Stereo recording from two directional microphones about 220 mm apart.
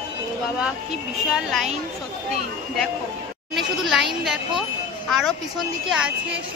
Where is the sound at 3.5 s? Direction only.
Centre (ahead or behind).